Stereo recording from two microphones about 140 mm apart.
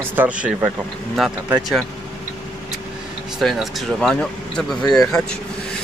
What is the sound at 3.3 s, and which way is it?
Speech, centre (ahead or behind).